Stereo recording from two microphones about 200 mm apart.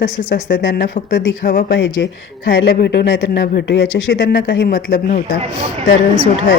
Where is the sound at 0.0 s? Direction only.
45° left (ahead or behind).